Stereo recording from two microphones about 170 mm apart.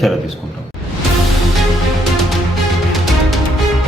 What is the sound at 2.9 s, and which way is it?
Music, centre (ahead or behind).